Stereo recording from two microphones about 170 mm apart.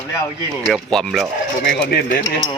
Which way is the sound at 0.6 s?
Centre (ahead or behind).